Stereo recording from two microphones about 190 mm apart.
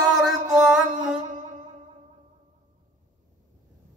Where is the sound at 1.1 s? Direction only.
40° right (ahead or behind).